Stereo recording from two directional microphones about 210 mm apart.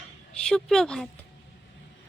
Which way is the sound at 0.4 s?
5° left (ahead or behind).